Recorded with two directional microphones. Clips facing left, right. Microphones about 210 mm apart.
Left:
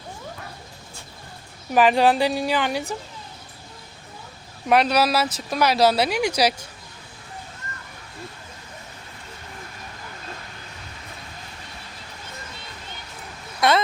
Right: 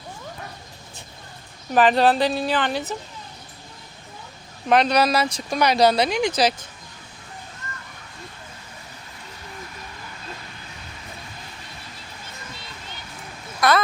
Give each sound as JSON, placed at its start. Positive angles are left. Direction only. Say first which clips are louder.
{"t": 1.7, "sound": "speech", "louder": "even", "side_deg": 10}
{"t": 4.7, "sound": "speech", "louder": "right 1 dB", "side_deg": 5}
{"t": 13.6, "sound": "a sound", "louder": "even", "side_deg": 25}